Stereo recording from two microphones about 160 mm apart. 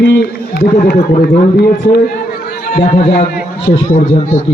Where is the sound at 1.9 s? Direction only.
70° left (ahead or behind).